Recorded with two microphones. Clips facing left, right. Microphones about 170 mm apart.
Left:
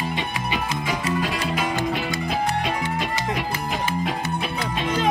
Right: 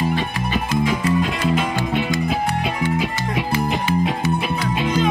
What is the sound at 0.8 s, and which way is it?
Music, centre (ahead or behind).